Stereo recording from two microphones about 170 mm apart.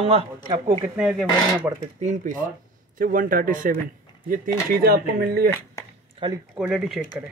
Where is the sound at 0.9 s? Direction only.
5° right (ahead or behind).